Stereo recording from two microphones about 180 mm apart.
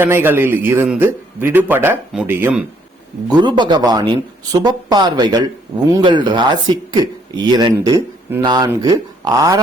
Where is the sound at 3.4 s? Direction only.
25° right (ahead or behind).